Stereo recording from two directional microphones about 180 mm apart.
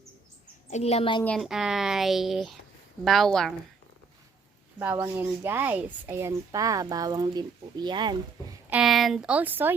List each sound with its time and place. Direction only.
0.7 s a child's voice: 35° left (ahead or behind)
1.2 s a woman's voice: centre (ahead or behind)
4.8 s speech: 10° right (ahead or behind); by 8.1 s 25° right (ahead or behind)
8.7 s a woman's voice: centre (ahead or behind)